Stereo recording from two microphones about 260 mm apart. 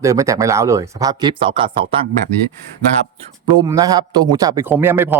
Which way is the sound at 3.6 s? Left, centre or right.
Centre.